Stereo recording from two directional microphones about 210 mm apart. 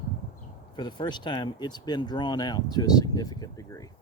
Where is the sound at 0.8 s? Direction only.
20° left (ahead or behind).